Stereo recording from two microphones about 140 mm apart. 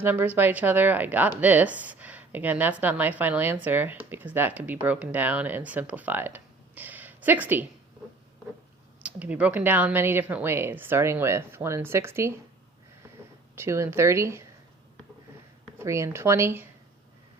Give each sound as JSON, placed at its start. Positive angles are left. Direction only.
{"t": 0.0, "sound": "a woman's voice", "side_deg": -15}
{"t": 9.0, "sound": "a woman's voice", "side_deg": -10}
{"t": 13.6, "sound": "speech", "side_deg": -20}
{"t": 15.8, "sound": "speech", "side_deg": -20}